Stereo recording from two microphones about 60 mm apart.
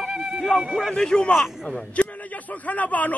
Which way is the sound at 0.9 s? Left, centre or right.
Centre.